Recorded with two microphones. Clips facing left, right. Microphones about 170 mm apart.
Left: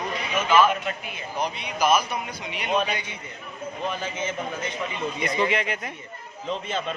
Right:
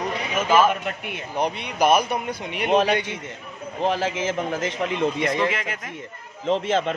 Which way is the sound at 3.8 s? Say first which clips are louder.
Right 7 dB; 90° right.